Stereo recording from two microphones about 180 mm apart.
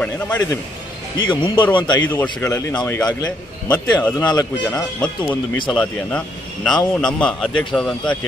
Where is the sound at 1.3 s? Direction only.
25° left (ahead or behind).